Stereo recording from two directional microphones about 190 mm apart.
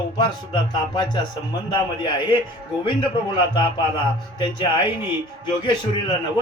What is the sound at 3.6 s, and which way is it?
Speech, 25° left (ahead or behind).